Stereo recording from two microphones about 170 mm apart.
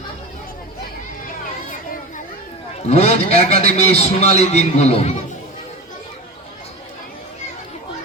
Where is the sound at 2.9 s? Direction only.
40° left (ahead or behind).